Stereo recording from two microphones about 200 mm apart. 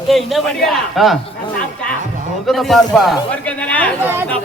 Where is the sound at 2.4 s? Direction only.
Centre (ahead or behind).